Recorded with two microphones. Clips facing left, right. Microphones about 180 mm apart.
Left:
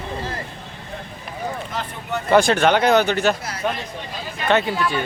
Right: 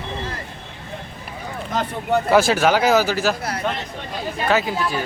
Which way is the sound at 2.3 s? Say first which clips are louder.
Left 2 dB; 5° right (ahead or behind).